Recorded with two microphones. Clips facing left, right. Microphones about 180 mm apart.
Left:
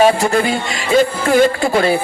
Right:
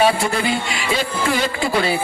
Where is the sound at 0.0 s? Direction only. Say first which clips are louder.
Left 5 dB; 45° left (ahead or behind).